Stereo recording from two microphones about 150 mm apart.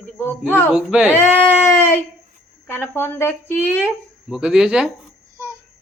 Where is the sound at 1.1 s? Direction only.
15° left (ahead or behind).